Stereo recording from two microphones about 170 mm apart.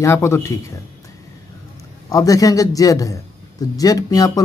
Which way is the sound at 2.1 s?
20° left (ahead or behind).